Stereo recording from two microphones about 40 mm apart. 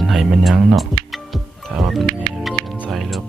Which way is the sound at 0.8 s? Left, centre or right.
Centre.